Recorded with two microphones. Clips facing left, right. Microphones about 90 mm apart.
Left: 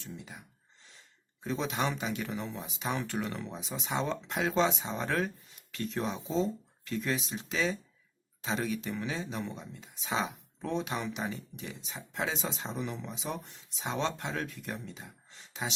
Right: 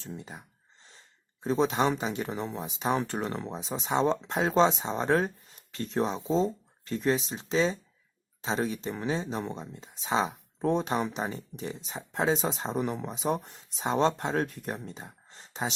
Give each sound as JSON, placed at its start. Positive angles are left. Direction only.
{"t": 0.0, "sound": "speech", "side_deg": -35}